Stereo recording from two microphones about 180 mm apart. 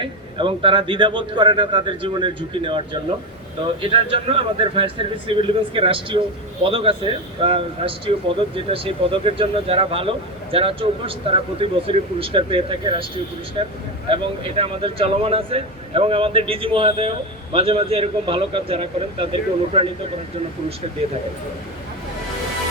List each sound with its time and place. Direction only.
0.0 s a man's voice: 30° right (ahead or behind)